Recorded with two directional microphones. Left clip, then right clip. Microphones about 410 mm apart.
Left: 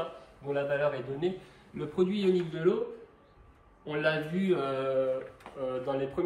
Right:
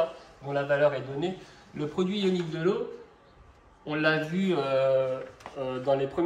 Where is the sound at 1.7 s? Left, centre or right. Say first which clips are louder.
Even; centre.